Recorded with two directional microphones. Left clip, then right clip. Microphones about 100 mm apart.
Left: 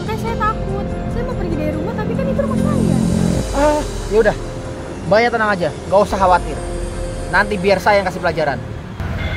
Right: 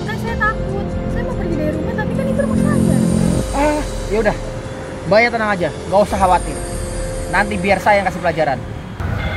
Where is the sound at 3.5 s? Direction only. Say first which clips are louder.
Left 3 dB; 30° left (ahead or behind).